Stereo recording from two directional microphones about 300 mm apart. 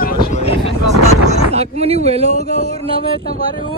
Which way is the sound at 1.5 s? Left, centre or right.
Centre.